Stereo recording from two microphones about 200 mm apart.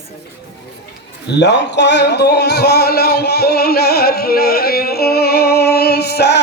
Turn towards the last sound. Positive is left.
turn(degrees=55)  # may be behind; listen again after turning